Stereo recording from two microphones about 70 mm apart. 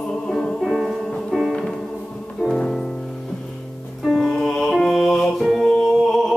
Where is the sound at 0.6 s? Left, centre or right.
Centre.